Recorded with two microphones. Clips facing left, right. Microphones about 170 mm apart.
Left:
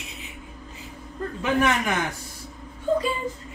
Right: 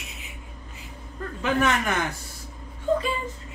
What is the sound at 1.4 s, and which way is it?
Speech, 10° left (ahead or behind).